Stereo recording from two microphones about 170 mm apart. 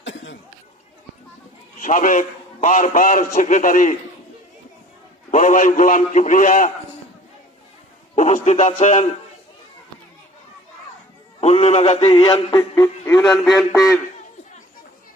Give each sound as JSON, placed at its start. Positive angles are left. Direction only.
{"t": 0.0, "sound": "cough", "side_deg": 90}
{"t": 1.8, "sound": "a man's voice", "side_deg": 50}
{"t": 5.3, "sound": "a man's voice", "side_deg": 45}
{"t": 8.1, "sound": "a sound", "side_deg": 45}
{"t": 8.4, "sound": "a man's voice", "side_deg": 45}
{"t": 11.3, "sound": "a man's voice", "side_deg": 40}
{"t": 13.3, "sound": "a man's voice", "side_deg": 0}